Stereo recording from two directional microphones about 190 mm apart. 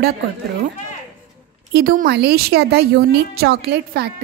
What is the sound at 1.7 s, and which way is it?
A woman's voice, 50° right (ahead or behind).